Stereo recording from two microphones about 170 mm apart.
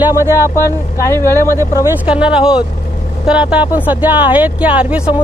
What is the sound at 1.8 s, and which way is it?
Speech, 10° right (ahead or behind).